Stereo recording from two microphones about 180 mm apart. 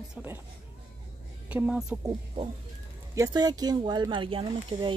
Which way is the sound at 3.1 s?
20° right (ahead or behind).